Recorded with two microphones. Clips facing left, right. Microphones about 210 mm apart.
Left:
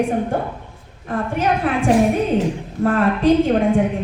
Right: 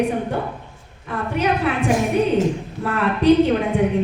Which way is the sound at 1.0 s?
50° left (ahead or behind).